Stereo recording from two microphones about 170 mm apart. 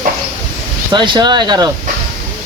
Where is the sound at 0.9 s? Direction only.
30° right (ahead or behind).